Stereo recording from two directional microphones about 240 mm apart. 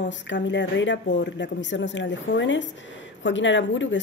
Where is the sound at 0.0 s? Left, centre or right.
Left.